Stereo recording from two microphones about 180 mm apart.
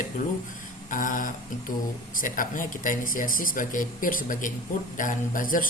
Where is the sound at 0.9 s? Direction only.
45° left (ahead or behind).